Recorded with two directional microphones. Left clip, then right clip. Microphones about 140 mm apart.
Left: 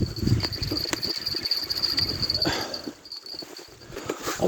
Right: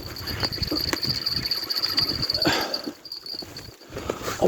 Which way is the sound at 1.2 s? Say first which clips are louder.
Right 1 dB; 40° right (ahead or behind).